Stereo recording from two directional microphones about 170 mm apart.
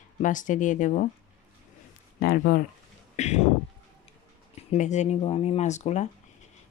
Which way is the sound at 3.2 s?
40° left (ahead or behind).